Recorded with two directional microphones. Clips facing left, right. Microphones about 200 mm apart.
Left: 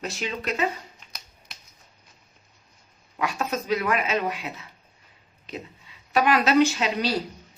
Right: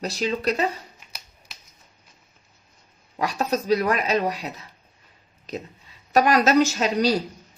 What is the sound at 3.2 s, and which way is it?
A woman's voice, 35° right (ahead or behind).